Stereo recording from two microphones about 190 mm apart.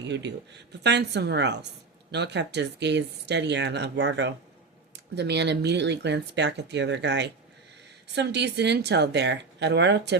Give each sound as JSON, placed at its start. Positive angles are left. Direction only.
{"t": 0.1, "sound": "speech", "side_deg": -70}